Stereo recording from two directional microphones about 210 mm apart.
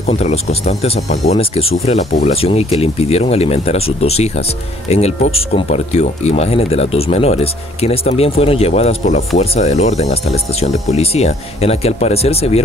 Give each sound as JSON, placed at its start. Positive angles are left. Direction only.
{"t": 0.1, "sound": "speech", "side_deg": 30}